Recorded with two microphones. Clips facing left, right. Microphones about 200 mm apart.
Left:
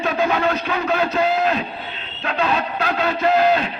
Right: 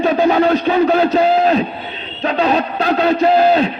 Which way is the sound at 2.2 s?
35° right (ahead or behind).